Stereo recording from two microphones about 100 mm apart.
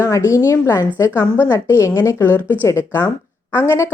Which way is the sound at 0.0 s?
35° left (ahead or behind).